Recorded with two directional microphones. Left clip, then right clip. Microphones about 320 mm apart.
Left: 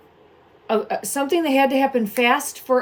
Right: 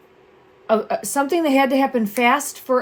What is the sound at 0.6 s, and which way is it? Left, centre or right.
Speech, centre.